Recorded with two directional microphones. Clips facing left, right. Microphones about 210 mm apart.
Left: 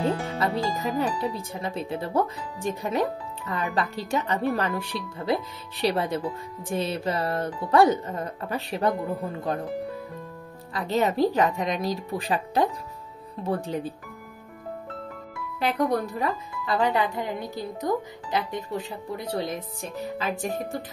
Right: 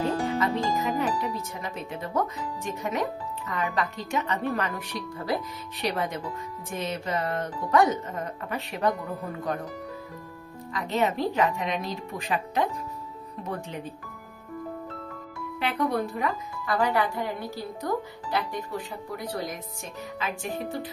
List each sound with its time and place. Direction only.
0.4 s speech: 35° left (ahead or behind)
10.7 s speech: 35° left (ahead or behind)
15.6 s speech: 40° left (ahead or behind)
16.6 s speech: 20° left (ahead or behind); by 20.6 s 40° left (ahead or behind)